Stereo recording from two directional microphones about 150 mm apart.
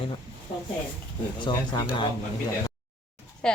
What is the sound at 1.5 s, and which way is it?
Speech, 25° left (ahead or behind).